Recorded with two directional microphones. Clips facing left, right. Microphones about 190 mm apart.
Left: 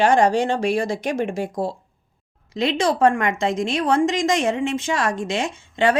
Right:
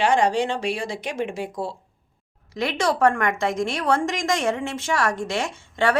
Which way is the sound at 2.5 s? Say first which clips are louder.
Left 3 dB; 20° left (ahead or behind).